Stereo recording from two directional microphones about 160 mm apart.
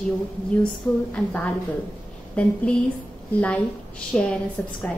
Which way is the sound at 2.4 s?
10° left (ahead or behind).